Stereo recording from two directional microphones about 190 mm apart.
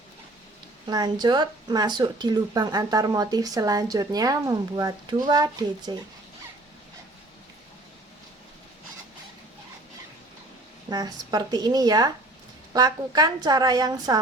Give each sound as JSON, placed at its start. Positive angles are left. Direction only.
{"t": 0.9, "sound": "speech", "side_deg": -20}
{"t": 10.8, "sound": "speech", "side_deg": -20}